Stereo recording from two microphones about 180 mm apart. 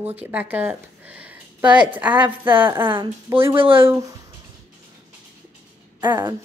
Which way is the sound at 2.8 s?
25° right (ahead or behind).